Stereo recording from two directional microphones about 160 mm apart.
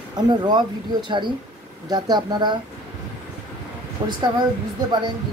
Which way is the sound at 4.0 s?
40° right (ahead or behind).